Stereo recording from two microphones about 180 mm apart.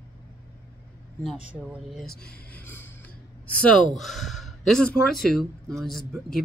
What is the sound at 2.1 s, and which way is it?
Speech, 60° left (ahead or behind).